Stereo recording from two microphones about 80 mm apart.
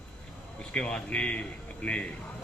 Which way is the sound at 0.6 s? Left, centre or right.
Centre.